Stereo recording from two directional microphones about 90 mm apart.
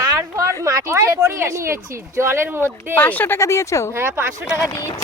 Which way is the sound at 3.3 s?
35° left (ahead or behind).